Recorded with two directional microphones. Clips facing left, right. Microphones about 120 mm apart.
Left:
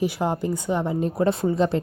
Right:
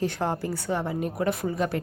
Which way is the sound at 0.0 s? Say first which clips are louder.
Left 3 dB; 10° left (ahead or behind).